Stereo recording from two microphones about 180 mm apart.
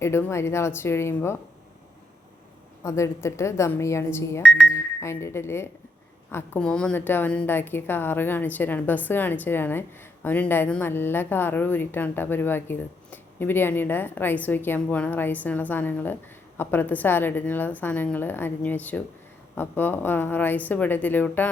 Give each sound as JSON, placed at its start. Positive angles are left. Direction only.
{"t": 0.0, "sound": "a woman's voice", "side_deg": 15}
{"t": 2.8, "sound": "a woman's voice", "side_deg": 15}